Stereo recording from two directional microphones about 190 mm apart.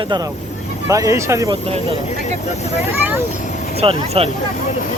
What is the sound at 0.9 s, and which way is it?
Speech, 15° right (ahead or behind).